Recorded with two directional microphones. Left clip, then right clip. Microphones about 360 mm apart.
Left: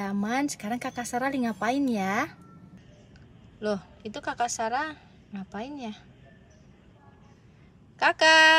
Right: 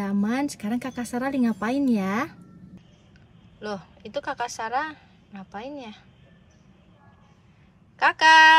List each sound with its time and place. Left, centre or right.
0.0 s a woman's voice: centre
3.6 s a woman's voice: centre
8.0 s a woman's voice: centre